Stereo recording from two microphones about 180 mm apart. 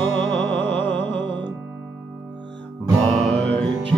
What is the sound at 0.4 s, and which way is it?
Music, 80° right.